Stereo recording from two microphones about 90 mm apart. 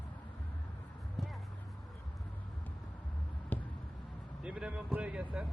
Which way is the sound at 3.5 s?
20° left (ahead or behind).